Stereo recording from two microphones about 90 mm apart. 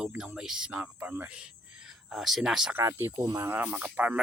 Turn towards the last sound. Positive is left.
turn(degrees=-15)  # may be behind; listen again after turning